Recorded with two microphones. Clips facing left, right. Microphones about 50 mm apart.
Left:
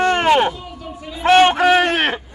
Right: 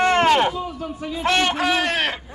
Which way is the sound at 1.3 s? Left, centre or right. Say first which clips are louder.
Left 8 dB; left.